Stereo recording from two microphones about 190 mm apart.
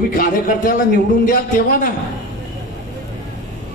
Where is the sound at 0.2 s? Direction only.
50° left (ahead or behind).